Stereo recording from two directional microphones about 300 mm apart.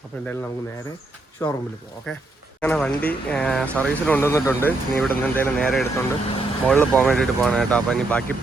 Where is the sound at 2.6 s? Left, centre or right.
Centre.